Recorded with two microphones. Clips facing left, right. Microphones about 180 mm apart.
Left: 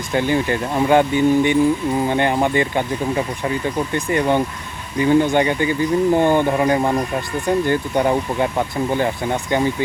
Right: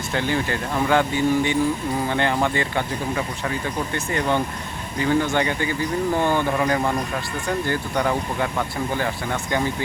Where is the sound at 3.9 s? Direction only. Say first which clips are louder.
Left 5 dB; 15° left (ahead or behind).